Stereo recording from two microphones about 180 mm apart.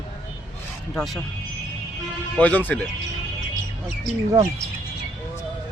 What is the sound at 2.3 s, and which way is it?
Speech, 10° left (ahead or behind).